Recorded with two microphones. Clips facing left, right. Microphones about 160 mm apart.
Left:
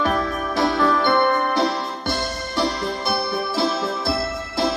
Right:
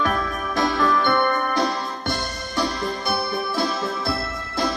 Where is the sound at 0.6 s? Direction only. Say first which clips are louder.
Left 2 dB; 55° left (ahead or behind).